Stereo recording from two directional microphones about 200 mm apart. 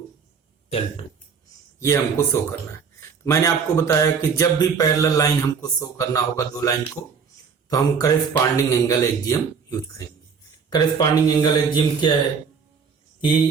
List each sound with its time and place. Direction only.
0.7 s a man's voice: 30° left (ahead or behind)
1.8 s speech: 15° left (ahead or behind)
3.2 s a man's voice: 15° left (ahead or behind)